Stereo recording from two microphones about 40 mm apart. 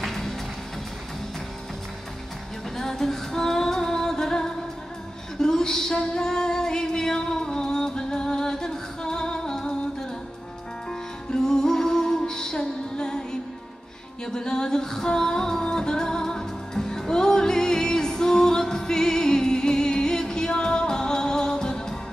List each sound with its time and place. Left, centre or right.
0.0 s music: centre
2.8 s female singing: centre
5.4 s music: centre